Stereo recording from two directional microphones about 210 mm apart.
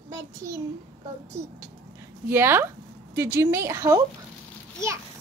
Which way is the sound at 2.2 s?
10° right (ahead or behind).